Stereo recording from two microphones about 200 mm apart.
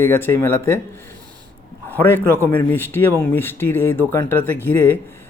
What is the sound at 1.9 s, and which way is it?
Speech, 10° left (ahead or behind).